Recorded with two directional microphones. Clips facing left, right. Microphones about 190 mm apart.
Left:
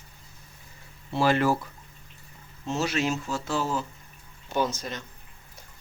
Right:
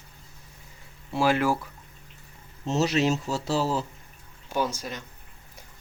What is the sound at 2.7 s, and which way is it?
Speech, 35° right (ahead or behind).